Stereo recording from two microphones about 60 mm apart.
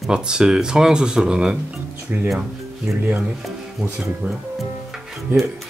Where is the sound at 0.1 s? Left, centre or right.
Centre.